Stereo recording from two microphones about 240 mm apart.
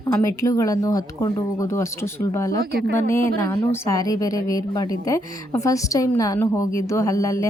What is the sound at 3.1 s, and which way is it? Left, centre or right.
A woman's voice, centre.